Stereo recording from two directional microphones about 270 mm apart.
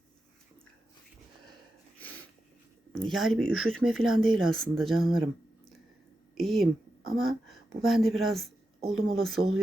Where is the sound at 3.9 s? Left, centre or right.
Right.